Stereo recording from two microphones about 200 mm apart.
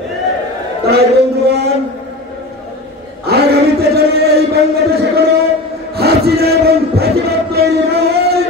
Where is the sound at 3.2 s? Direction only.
55° right (ahead or behind).